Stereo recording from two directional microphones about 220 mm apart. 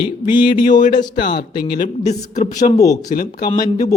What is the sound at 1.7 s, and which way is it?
Speech, 35° left (ahead or behind).